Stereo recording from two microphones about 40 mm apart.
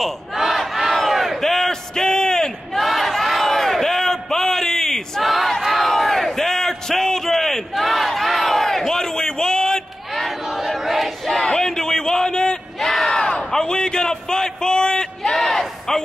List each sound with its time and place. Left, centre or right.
0.3 s battle cry: centre
1.4 s a sound: centre
2.8 s battle cry: centre
5.2 s battle cry: centre
10.4 s crowd: centre
11.4 s a sound: centre
12.7 s crowd: centre
13.4 s a sound: centre
15.3 s crowd: centre